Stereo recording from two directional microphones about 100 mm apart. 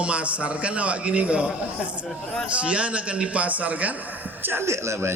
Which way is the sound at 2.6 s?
10° right (ahead or behind).